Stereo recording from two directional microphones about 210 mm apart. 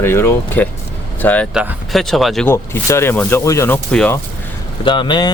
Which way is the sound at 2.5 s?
15° left (ahead or behind).